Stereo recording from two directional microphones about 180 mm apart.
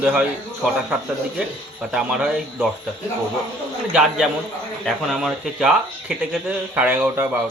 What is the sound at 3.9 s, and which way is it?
Speech, centre (ahead or behind).